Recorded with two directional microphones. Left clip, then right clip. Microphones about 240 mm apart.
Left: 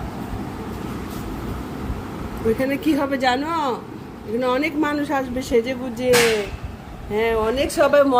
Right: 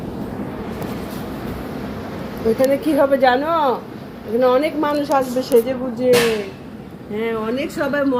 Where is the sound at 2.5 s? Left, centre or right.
Left.